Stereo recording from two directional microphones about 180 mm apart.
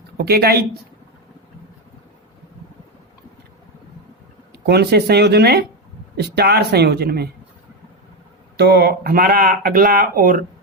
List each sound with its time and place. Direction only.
0.2 s speech: 60° right (ahead or behind)
4.5 s speech: 65° right (ahead or behind)
8.5 s speech: 65° right (ahead or behind)